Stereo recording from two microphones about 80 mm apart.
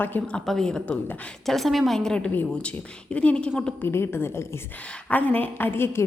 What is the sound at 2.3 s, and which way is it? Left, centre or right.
A woman's voice, left.